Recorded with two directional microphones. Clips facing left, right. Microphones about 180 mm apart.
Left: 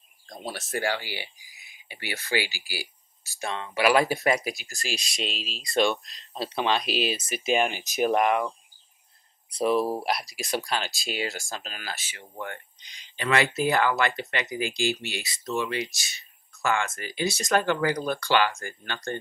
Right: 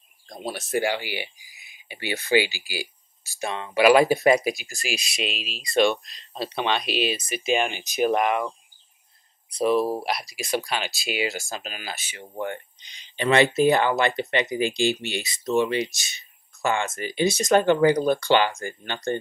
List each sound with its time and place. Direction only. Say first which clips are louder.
0.3 s speech: right 5 dB; 15° right (ahead or behind)
9.6 s speech: right 2 dB; centre (ahead or behind); by 19.1 s 20° right (ahead or behind)